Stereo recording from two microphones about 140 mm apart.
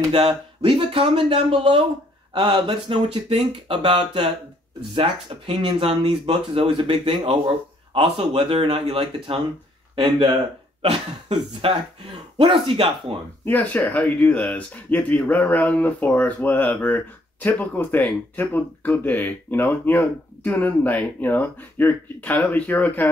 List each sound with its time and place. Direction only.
0.1 s speech: 40° right (ahead or behind)
10.8 s speech: 45° right (ahead or behind)
13.5 s speech: 10° left (ahead or behind)